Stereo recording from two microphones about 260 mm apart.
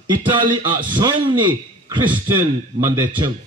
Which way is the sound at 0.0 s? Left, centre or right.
Centre.